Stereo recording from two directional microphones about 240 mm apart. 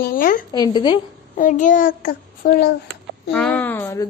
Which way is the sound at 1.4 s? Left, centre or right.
Left.